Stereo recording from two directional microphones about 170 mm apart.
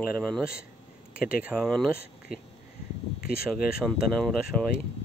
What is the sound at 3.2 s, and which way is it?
Speech, 60° left (ahead or behind).